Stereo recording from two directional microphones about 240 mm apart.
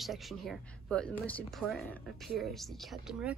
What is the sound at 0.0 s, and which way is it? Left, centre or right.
Speech, centre.